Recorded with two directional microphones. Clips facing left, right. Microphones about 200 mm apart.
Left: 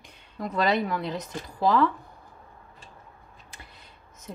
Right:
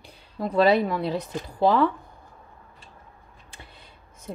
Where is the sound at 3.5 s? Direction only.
30° right (ahead or behind).